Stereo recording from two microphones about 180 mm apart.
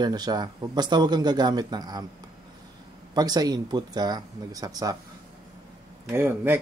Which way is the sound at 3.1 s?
20° right (ahead or behind).